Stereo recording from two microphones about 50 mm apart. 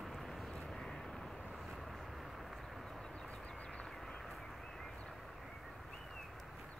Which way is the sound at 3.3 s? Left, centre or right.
Left.